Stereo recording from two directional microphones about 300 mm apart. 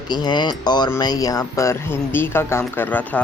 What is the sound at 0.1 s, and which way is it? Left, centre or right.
Speech, centre.